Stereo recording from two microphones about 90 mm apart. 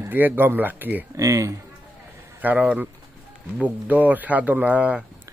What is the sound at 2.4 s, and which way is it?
Speech, 15° right (ahead or behind).